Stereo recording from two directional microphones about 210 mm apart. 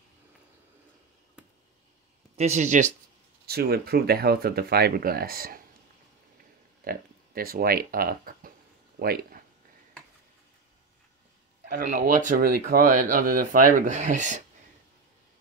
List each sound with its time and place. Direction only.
2.3 s speech: 30° right (ahead or behind)
3.4 s speech: 50° right (ahead or behind)
6.8 s speech: 45° right (ahead or behind)
11.6 s speech: 40° right (ahead or behind)